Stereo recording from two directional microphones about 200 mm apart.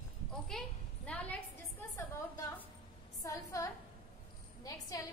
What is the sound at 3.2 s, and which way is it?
A woman's voice, 15° left (ahead or behind).